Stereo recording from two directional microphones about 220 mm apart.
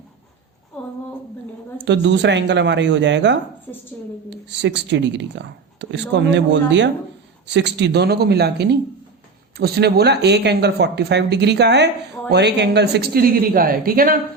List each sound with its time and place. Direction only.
1.8 s speech: 55° right (ahead or behind)
3.7 s a woman's voice: 10° left (ahead or behind)
4.3 s speech: 50° right (ahead or behind)